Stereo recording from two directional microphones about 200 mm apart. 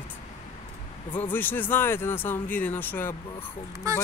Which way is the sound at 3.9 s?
15° right (ahead or behind).